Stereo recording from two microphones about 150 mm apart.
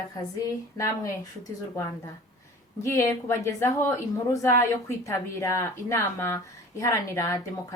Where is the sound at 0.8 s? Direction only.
20° left (ahead or behind).